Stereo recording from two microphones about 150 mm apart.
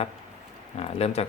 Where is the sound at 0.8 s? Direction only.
40° left (ahead or behind).